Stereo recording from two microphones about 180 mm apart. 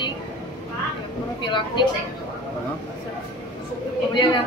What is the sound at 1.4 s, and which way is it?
Speech, 25° left (ahead or behind).